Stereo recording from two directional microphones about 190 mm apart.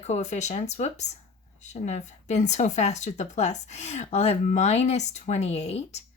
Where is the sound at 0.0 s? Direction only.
35° left (ahead or behind).